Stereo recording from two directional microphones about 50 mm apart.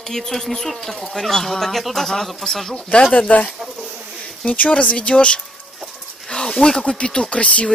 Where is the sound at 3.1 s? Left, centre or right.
Left.